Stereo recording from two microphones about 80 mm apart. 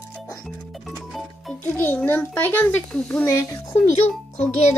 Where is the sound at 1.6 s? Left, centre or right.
Left.